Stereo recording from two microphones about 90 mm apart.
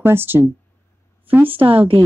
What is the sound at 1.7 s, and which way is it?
Speech, 90° right.